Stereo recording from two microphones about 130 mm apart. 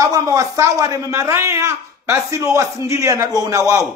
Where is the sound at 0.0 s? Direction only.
25° right (ahead or behind).